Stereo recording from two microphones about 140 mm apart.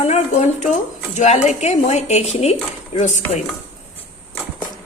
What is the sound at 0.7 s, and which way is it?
Speech, 55° left (ahead or behind).